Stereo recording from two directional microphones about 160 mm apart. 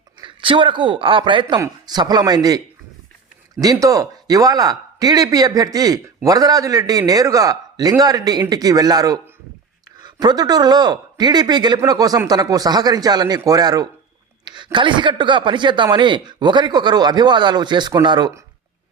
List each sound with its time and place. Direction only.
0.2 s a man's voice: 30° right (ahead or behind)
3.6 s speech: 20° right (ahead or behind)